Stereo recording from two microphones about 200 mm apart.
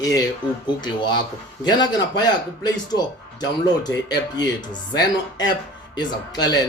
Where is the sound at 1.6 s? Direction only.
20° left (ahead or behind).